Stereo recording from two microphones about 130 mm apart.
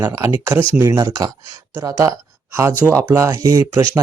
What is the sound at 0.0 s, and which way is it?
Speech, 25° right (ahead or behind).